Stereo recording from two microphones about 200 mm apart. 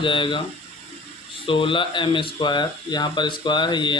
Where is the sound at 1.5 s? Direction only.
25° left (ahead or behind).